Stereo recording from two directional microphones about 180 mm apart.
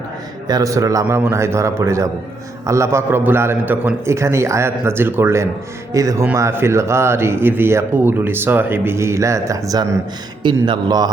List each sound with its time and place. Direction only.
0.4 s a man's voice: 20° right (ahead or behind)